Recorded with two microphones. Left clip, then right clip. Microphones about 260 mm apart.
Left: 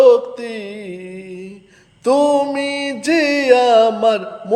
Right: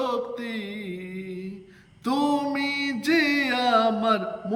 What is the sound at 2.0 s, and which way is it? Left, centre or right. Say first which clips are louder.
Music: left 11 dB; centre.